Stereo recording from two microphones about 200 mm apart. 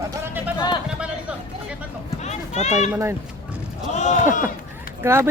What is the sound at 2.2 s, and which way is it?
Children playing, 35° left (ahead or behind).